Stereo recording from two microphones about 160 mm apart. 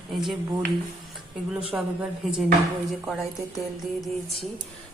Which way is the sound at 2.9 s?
Centre (ahead or behind).